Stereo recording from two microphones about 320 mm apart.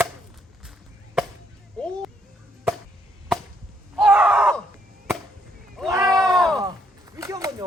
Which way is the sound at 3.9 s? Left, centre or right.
Centre.